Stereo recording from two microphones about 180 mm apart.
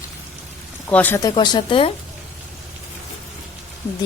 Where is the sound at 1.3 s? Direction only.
25° left (ahead or behind).